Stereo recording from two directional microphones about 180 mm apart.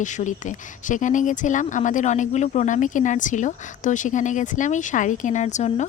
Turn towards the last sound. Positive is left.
turn(degrees=40)  # may be behind; listen again after turning